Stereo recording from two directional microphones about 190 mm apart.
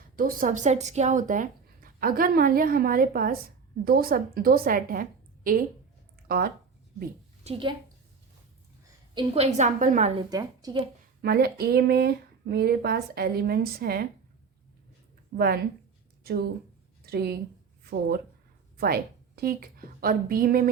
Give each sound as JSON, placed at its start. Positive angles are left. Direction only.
{"t": 0.2, "sound": "speech", "side_deg": -45}
{"t": 7.4, "sound": "a woman's voice", "side_deg": -30}
{"t": 9.1, "sound": "a woman's voice", "side_deg": -30}
{"t": 10.2, "sound": "a woman's voice", "side_deg": -20}
{"t": 11.2, "sound": "speech", "side_deg": -55}
{"t": 15.4, "sound": "speech", "side_deg": -55}
{"t": 18.8, "sound": "a woman's voice", "side_deg": -55}